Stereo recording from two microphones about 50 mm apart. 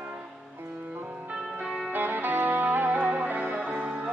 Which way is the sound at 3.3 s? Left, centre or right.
Right.